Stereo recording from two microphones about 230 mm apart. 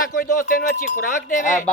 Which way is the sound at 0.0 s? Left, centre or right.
Left.